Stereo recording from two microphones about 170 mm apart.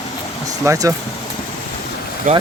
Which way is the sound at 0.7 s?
20° right (ahead or behind).